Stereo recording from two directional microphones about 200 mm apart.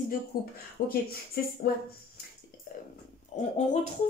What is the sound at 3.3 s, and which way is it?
Speech, 35° left (ahead or behind).